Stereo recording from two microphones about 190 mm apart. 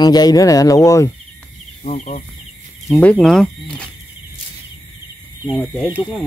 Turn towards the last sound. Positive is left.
turn(degrees=-10)  # may be behind; listen again after turning